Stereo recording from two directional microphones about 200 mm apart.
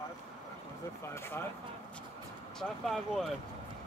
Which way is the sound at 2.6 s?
Centre (ahead or behind).